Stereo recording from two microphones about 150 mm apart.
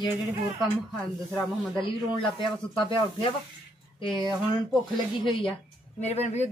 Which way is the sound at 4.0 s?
30° left (ahead or behind).